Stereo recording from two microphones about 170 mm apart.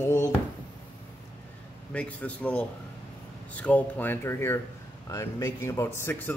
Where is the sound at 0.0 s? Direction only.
15° left (ahead or behind).